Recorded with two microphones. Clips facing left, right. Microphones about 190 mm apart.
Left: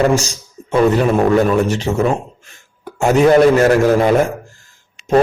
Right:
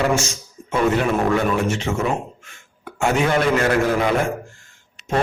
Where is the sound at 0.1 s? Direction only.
35° left (ahead or behind).